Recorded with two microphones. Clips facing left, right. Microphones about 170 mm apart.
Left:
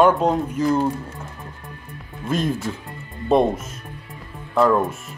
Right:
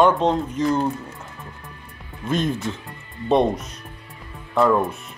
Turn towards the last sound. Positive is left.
turn(degrees=0)  # may be behind; listen again after turning